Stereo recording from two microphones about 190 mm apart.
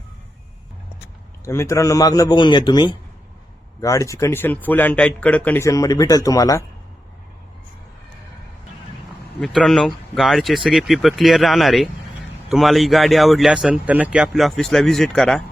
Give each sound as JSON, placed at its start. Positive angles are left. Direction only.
{"t": 1.5, "sound": "a man's voice", "side_deg": 15}
{"t": 9.4, "sound": "speech", "side_deg": 0}